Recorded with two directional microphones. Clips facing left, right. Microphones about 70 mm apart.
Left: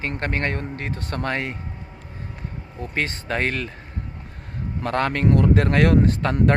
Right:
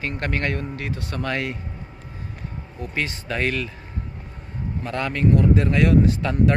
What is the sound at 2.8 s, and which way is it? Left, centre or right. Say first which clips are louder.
Speech: left 1 dB; left.